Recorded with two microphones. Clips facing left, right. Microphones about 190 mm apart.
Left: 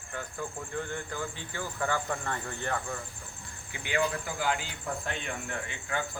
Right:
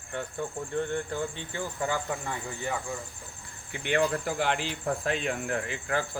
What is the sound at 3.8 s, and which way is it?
Speech, 65° right (ahead or behind).